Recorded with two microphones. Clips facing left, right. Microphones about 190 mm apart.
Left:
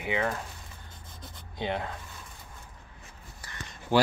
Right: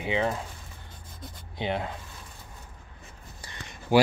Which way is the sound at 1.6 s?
20° right (ahead or behind).